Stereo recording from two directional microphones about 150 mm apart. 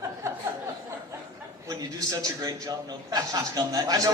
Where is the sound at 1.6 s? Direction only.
25° right (ahead or behind).